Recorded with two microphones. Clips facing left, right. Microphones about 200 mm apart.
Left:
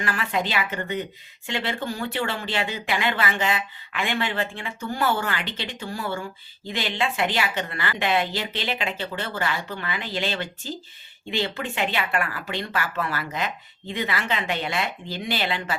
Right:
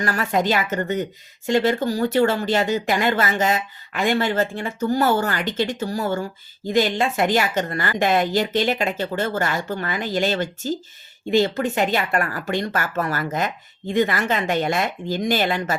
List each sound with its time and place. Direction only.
0.0 s speech: 40° right (ahead or behind)